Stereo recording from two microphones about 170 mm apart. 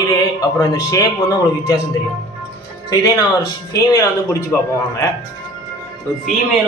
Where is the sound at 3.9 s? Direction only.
20° left (ahead or behind).